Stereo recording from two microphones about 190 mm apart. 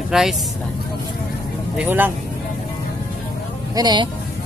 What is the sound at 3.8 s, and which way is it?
Speech, 20° right (ahead or behind).